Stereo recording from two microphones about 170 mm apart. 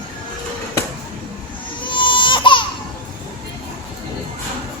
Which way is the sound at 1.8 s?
30° left (ahead or behind).